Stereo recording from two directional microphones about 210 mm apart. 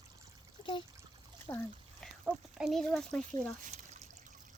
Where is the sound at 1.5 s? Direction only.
20° left (ahead or behind).